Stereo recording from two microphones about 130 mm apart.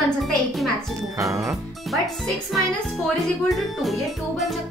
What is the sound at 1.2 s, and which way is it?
Speech, 25° right (ahead or behind).